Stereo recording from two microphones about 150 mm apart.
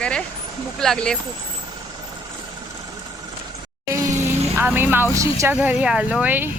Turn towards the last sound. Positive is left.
turn(degrees=-10)  # may be behind; listen again after turning